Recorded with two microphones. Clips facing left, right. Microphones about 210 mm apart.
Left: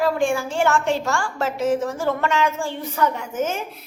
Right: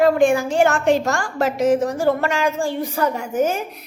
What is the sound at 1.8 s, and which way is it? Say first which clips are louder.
A woman's voice: right 4 dB; 40° right (ahead or behind).